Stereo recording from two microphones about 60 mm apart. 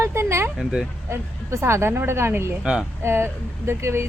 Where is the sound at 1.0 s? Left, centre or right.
Right.